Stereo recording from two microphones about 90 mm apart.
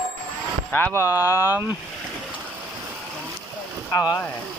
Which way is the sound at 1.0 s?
40° left (ahead or behind).